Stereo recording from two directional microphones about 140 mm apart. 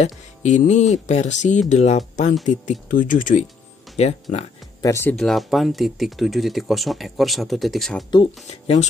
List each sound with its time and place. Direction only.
0.0 s speech: 60° left (ahead or behind)
3.9 s speech: 50° left (ahead or behind)
4.8 s speech: 20° left (ahead or behind)
5.1 s speech: centre (ahead or behind)
8.5 s speech: 50° left (ahead or behind)